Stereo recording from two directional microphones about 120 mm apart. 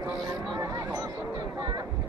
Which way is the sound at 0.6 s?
30° right (ahead or behind).